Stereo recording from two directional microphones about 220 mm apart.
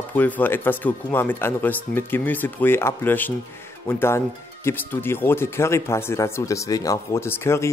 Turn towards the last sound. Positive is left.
turn(degrees=10)  # may be behind; listen again after turning